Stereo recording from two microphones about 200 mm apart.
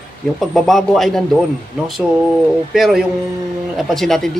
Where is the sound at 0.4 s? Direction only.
Centre (ahead or behind).